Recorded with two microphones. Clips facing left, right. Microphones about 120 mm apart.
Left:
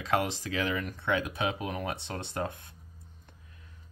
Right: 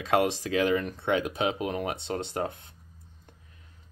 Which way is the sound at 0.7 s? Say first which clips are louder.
Right 4 dB; 30° right (ahead or behind).